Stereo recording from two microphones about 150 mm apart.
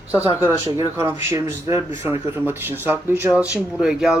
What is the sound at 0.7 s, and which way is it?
Speech, 20° right (ahead or behind).